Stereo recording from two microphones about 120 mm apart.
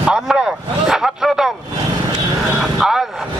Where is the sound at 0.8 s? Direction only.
5° right (ahead or behind).